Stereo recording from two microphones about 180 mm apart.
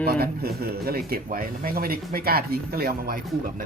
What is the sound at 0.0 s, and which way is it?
Speech, 60° right (ahead or behind).